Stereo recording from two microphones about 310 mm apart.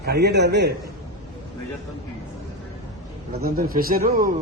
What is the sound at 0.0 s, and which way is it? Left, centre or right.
Speech, right.